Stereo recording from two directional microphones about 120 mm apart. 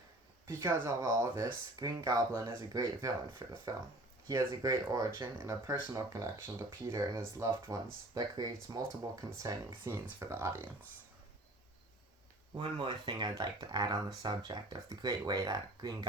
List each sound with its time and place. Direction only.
0.4 s speech: 20° right (ahead or behind)
12.5 s speech: 40° right (ahead or behind)